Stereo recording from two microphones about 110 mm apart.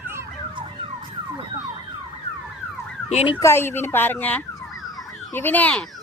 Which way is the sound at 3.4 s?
25° left (ahead or behind).